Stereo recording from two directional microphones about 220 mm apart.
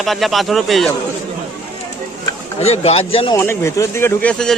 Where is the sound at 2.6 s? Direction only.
30° left (ahead or behind).